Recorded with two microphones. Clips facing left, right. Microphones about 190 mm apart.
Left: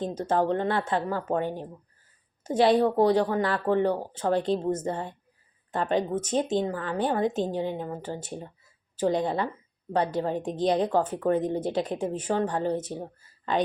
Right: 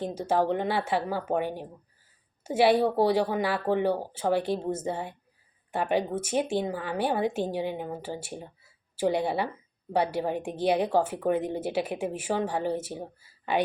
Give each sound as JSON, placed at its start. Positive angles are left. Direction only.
{"t": 0.0, "sound": "speech", "side_deg": -10}